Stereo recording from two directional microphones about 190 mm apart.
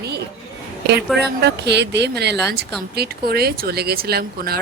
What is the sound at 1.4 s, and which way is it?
A woman's voice, 65° right (ahead or behind).